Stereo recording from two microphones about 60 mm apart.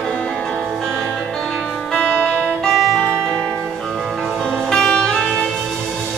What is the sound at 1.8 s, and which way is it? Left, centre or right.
Music, centre.